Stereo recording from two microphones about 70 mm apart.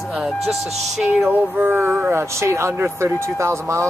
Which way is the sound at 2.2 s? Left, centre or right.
Right.